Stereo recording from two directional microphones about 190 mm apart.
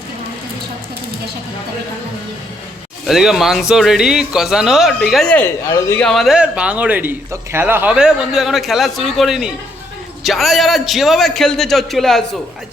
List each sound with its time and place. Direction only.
3.1 s a man's voice: centre (ahead or behind)
5.6 s speech: 15° left (ahead or behind)
6.0 s a man's voice: centre (ahead or behind)